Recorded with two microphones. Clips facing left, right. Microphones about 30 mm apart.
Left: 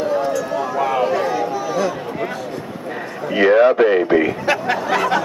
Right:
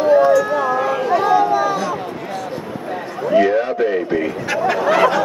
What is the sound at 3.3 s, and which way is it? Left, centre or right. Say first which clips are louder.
A man's voice: left 3 dB; left.